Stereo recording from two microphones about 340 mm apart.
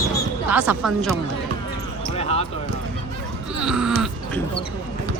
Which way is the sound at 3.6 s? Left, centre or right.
Centre.